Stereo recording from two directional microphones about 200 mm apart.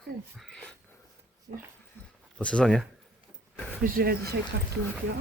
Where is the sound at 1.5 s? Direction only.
50° right (ahead or behind).